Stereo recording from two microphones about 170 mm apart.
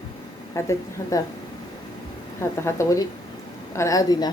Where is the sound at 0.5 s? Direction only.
15° left (ahead or behind).